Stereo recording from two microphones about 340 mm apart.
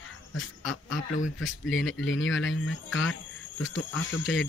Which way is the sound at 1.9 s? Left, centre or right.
Left.